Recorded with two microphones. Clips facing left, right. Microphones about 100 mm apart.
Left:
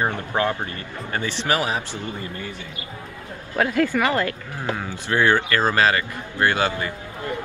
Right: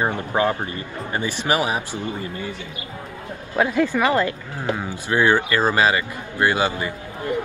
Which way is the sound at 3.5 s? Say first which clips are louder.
Right 1 dB; 20° right (ahead or behind).